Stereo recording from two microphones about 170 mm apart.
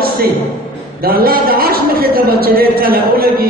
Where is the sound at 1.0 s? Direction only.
60° right (ahead or behind).